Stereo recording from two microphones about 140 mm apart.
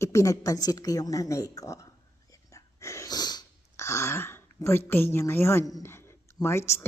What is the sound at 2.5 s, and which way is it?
Sneeze, 20° left (ahead or behind).